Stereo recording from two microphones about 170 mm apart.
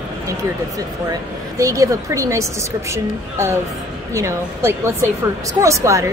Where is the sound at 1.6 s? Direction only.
20° right (ahead or behind).